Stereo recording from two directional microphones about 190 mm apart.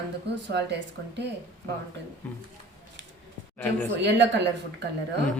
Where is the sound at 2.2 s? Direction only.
10° left (ahead or behind).